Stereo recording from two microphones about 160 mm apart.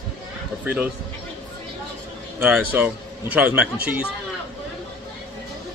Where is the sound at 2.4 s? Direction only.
10° right (ahead or behind).